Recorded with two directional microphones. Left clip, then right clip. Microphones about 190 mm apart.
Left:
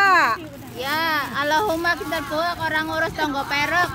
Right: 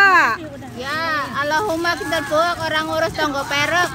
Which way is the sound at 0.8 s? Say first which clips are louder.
Even; 55° left (ahead or behind).